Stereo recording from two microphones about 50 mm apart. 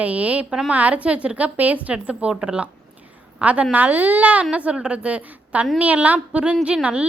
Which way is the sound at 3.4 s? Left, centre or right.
Right.